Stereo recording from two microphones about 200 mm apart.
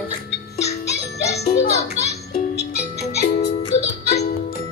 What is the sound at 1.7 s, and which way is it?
Music, 30° left (ahead or behind).